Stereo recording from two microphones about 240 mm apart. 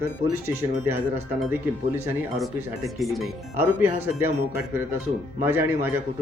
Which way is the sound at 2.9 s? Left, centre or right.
Centre.